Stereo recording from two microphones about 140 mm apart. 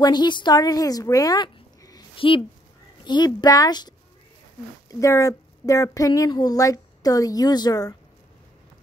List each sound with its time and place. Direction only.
0.0 s a woman's voice: 30° left (ahead or behind)
2.1 s a woman's voice: 40° left (ahead or behind)